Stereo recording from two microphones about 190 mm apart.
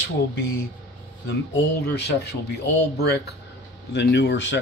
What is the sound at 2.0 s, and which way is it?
Speech, 60° left (ahead or behind).